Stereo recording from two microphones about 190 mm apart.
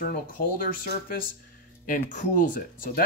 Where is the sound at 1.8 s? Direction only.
45° left (ahead or behind).